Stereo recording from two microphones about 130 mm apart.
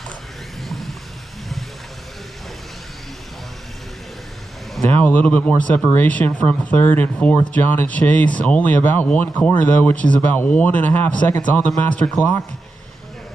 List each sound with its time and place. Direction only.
0.6 s vehicle: centre (ahead or behind)
4.8 s speech: 10° left (ahead or behind)